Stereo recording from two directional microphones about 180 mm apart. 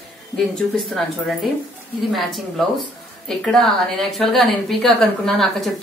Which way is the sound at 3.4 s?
Centre (ahead or behind).